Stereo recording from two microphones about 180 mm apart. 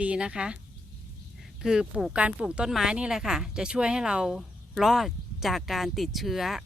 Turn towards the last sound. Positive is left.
turn(degrees=0)  # may be behind; listen again after turning